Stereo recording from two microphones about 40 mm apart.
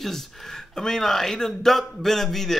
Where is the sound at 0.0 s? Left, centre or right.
Centre.